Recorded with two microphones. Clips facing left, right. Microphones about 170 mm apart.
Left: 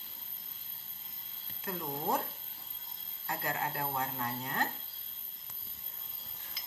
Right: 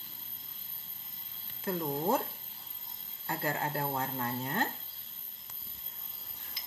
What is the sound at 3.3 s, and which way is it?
Speech, 30° right (ahead or behind).